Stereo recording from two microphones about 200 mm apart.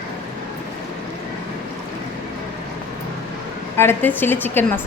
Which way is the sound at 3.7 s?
10° left (ahead or behind).